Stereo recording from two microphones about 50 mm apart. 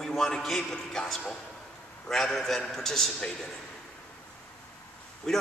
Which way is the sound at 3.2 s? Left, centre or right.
Centre.